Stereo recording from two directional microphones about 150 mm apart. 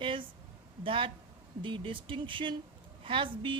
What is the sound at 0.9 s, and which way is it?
A woman's voice, 35° right (ahead or behind).